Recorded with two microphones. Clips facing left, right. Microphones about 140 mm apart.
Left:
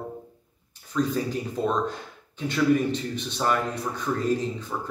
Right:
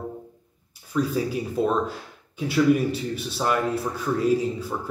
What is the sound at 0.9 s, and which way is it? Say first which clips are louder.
Speech: right 2 dB; 5° right (ahead or behind).